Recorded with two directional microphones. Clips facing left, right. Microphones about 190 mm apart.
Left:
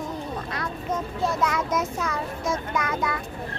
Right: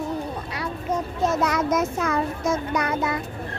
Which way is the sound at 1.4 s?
40° right (ahead or behind).